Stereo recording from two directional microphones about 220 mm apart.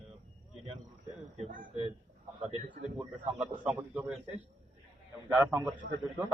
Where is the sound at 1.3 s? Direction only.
35° right (ahead or behind).